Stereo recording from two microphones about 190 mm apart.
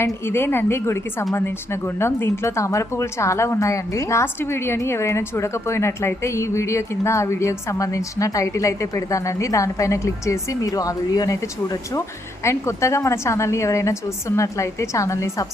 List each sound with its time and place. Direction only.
0.0 s a woman's voice: 10° left (ahead or behind)